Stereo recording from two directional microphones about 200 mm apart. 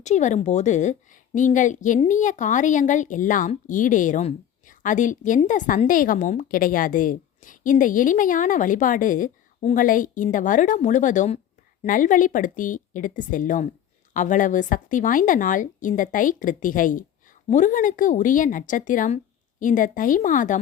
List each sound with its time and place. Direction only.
0.0 s a woman's voice: 35° left (ahead or behind)